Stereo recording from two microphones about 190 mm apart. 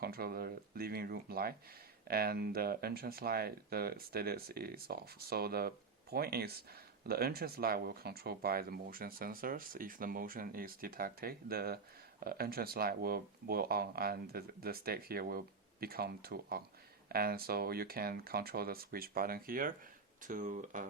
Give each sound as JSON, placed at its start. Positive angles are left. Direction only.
{"t": 0.0, "sound": "speech", "side_deg": -55}